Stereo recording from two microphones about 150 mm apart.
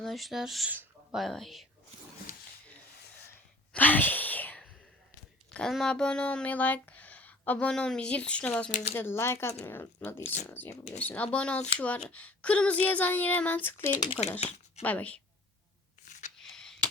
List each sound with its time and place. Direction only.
0.0 s speech: centre (ahead or behind)
3.7 s a sound: 10° left (ahead or behind)
5.5 s speech: 5° left (ahead or behind)
8.7 s speech: 45° left (ahead or behind)
9.0 s speech: 15° left (ahead or behind)
13.9 s speech: 30° left (ahead or behind)
14.4 s speech: 45° left (ahead or behind)
14.8 s speech: 10° left (ahead or behind)
16.0 s a sound: 55° left (ahead or behind)
16.4 s a sound: 5° left (ahead or behind)